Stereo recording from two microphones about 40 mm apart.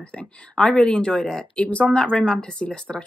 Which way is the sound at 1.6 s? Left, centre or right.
Left.